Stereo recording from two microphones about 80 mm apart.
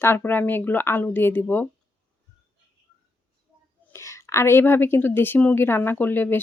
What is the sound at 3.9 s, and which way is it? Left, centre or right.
A woman's voice, left.